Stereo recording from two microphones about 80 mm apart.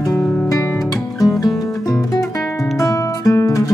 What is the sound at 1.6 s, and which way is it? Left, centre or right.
Music, left.